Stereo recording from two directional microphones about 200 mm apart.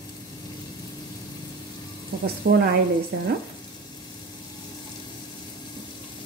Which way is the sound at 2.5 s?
50° right (ahead or behind).